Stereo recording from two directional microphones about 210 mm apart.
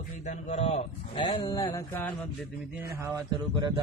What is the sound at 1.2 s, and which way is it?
Mantra, 20° left (ahead or behind).